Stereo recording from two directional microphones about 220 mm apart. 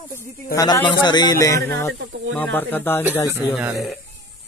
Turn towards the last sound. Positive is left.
turn(degrees=0)  # may be behind; listen again after turning